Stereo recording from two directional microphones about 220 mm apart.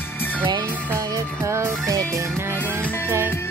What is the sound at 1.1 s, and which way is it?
Music, 10° right (ahead or behind).